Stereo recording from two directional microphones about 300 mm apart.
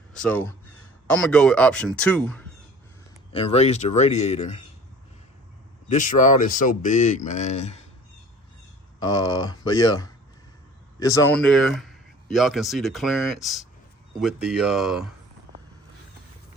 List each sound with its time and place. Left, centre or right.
0.1 s speech: centre
3.3 s speech: centre
5.9 s speech: left
9.0 s speech: centre